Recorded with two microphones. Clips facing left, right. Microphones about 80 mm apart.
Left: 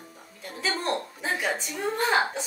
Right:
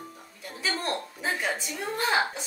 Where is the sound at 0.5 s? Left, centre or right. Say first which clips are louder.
Left 2 dB; centre.